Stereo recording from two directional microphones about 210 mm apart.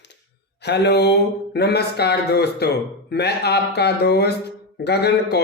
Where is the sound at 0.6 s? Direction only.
50° left (ahead or behind).